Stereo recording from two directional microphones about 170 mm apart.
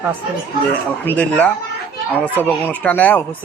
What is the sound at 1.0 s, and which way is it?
Speech, 10° left (ahead or behind).